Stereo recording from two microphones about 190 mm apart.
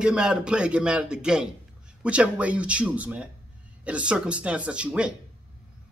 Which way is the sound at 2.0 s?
5° right (ahead or behind).